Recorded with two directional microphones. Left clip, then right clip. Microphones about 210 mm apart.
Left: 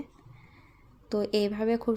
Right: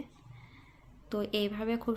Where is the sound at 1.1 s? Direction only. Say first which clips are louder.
Left 5 dB; 20° left (ahead or behind).